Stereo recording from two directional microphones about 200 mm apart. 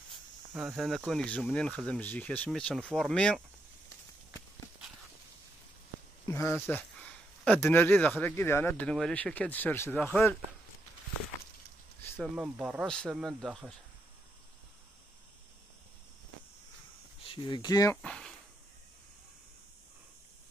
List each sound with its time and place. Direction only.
0.5 s speech: centre (ahead or behind)
6.2 s speech: 10° left (ahead or behind)
12.0 s a sound: 10° left (ahead or behind)
12.4 s speech: 5° right (ahead or behind)
17.2 s speech: 25° left (ahead or behind)
18.0 s a sound: 5° left (ahead or behind)